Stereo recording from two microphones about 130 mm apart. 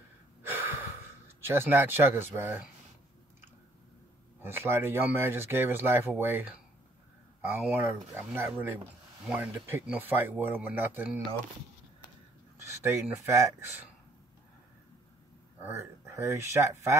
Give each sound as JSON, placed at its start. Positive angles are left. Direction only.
{"t": 0.4, "sound": "gasp", "side_deg": -15}
{"t": 1.4, "sound": "speech", "side_deg": -15}
{"t": 4.4, "sound": "speech", "side_deg": -15}
{"t": 12.8, "sound": "speech", "side_deg": -20}
{"t": 15.6, "sound": "speech", "side_deg": -20}